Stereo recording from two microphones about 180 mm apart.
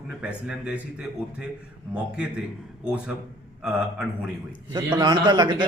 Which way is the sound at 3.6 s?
5° right (ahead or behind).